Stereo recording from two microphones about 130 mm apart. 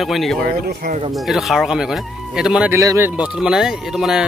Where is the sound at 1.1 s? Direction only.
Centre (ahead or behind).